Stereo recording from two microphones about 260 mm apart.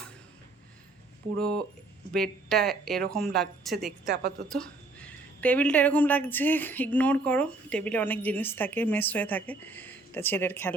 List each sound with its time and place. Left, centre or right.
1.4 s speech: centre
4.0 s a woman's voice: right
4.4 s a woman's voice: centre